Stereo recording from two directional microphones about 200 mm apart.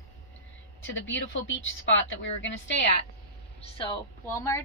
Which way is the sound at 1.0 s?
70° left (ahead or behind).